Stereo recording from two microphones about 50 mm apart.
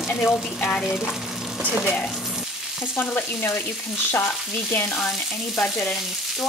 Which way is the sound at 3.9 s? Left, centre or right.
Left.